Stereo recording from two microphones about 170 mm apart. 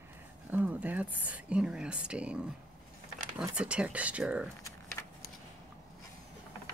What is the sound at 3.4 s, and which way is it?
Speech, 5° right (ahead or behind).